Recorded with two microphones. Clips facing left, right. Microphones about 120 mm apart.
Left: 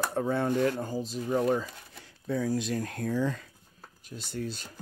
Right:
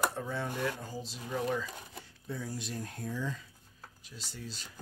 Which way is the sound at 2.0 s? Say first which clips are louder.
Left 12 dB; 90° left.